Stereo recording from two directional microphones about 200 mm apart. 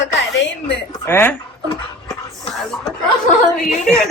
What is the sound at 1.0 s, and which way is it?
Speech, 10° left (ahead or behind).